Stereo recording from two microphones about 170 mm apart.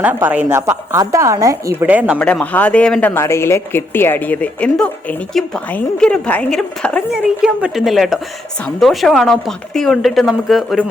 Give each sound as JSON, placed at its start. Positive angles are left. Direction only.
{"t": 0.0, "sound": "speech", "side_deg": -10}
{"t": 2.1, "sound": "a woman's voice", "side_deg": 10}